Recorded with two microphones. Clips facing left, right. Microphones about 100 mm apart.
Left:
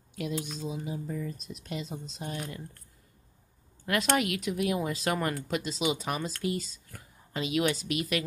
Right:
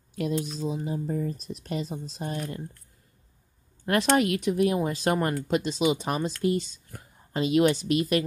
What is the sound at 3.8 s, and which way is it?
A woman's voice, 35° right (ahead or behind).